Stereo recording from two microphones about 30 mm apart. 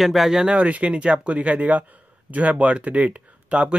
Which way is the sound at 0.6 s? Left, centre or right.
Right.